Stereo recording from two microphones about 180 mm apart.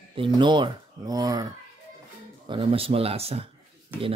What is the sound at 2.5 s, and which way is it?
Speech, 30° right (ahead or behind).